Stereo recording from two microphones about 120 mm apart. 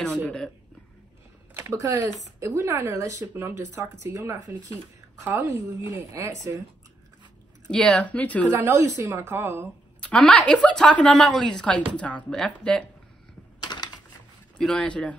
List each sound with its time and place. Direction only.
1.5 s computer keyboard: 20° right (ahead or behind)
2.4 s speech: 25° right (ahead or behind)
7.6 s a woman's voice: 5° left (ahead or behind)
8.5 s speech: 20° right (ahead or behind)
9.9 s a woman's voice: 10° left (ahead or behind)
13.6 s typing: 35° left (ahead or behind)
14.6 s a woman's voice: 10° left (ahead or behind)